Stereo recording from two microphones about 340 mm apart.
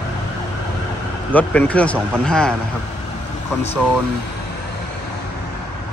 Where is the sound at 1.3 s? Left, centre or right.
Centre.